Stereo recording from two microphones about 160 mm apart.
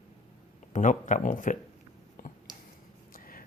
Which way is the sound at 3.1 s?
60° left (ahead or behind).